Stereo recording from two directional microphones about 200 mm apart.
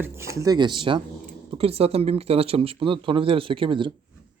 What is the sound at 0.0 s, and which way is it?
Speech, 15° right (ahead or behind).